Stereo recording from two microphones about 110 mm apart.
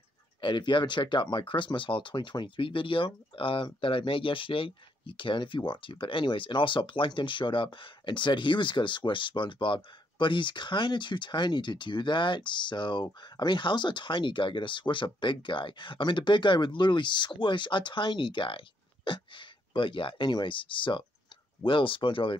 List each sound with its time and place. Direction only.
0.4 s speech: 45° left (ahead or behind)